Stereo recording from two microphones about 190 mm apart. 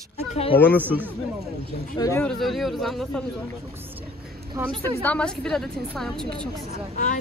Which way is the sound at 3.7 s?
10° right (ahead or behind).